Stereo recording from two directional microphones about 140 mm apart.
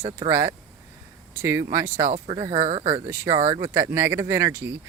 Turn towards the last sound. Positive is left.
turn(degrees=-20)  # may be behind; listen again after turning